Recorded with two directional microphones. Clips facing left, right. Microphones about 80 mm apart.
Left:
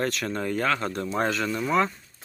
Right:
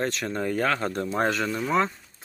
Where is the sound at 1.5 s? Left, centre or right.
Centre.